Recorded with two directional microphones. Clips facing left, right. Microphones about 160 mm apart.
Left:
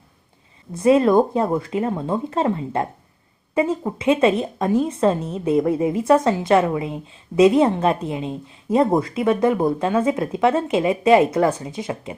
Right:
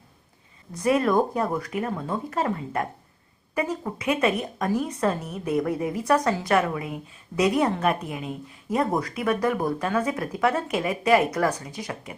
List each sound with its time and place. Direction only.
0.7 s speech: 25° left (ahead or behind)